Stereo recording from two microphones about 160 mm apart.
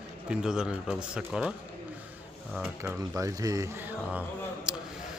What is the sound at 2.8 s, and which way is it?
A man's voice, 15° right (ahead or behind).